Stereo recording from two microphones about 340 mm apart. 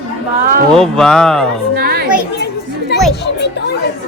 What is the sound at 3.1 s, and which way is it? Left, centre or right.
Speech, left.